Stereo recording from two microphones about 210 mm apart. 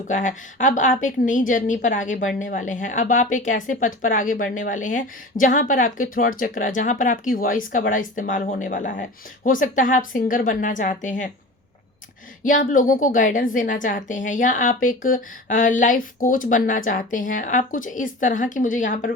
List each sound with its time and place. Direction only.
0.1 s a woman's voice: 35° left (ahead or behind)
12.4 s a woman's voice: 40° left (ahead or behind)